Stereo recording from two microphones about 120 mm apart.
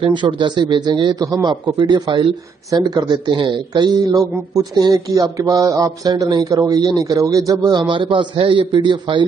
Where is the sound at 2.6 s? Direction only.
35° right (ahead or behind).